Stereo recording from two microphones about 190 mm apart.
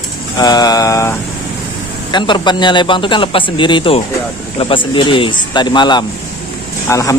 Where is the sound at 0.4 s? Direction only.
20° left (ahead or behind).